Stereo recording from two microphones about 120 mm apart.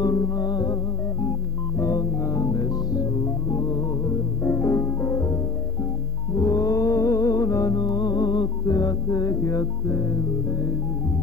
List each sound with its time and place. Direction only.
0.0 s music: 30° left (ahead or behind)
1.8 s music: 25° left (ahead or behind)